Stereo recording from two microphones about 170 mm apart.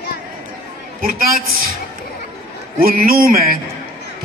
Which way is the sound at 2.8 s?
60° right (ahead or behind).